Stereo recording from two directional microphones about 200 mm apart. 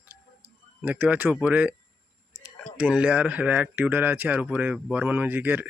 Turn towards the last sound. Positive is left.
turn(degrees=-10)  # may be behind; listen again after turning